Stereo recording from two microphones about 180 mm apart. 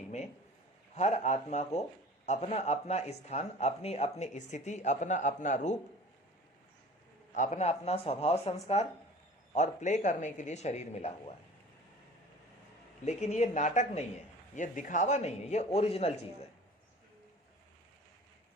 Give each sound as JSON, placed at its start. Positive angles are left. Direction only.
{"t": 0.9, "sound": "speech", "side_deg": 40}
{"t": 7.3, "sound": "speech", "side_deg": 45}
{"t": 13.1, "sound": "speech", "side_deg": 40}